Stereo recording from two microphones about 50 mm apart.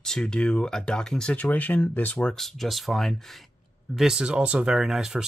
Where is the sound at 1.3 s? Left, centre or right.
Left.